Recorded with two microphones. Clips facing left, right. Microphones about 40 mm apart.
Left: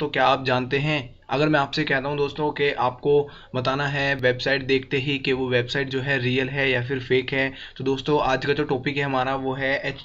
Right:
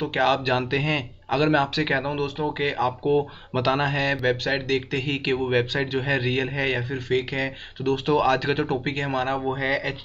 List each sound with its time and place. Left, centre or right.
0.0 s speech: centre
3.5 s speech: centre
7.8 s speech: centre